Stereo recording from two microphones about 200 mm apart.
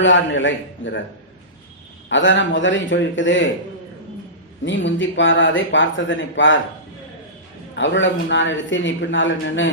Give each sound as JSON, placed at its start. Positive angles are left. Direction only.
{"t": 0.0, "sound": "speech", "side_deg": 70}
{"t": 2.0, "sound": "speech", "side_deg": 65}
{"t": 4.6, "sound": "speech", "side_deg": 65}
{"t": 7.8, "sound": "speech", "side_deg": 65}